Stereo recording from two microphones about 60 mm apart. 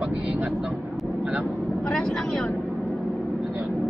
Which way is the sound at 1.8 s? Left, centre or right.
Centre.